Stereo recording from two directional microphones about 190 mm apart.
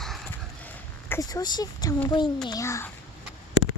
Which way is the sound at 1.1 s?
20° left (ahead or behind).